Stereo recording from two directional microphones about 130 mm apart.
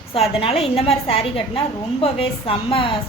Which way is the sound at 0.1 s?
50° left (ahead or behind).